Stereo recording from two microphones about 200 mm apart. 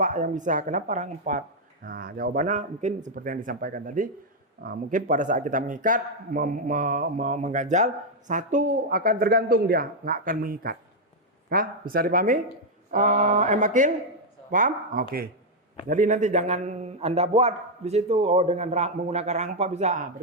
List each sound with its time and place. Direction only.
0.0 s speech: 40° right (ahead or behind)